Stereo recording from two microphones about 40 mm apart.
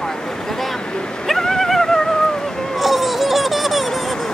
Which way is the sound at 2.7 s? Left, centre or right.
Centre.